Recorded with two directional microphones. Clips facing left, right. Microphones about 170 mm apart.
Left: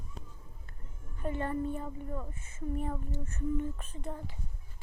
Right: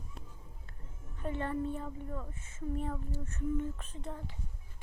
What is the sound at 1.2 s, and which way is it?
Speech, 5° left (ahead or behind).